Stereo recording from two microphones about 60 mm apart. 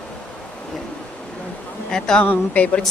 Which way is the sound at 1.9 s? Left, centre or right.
Centre.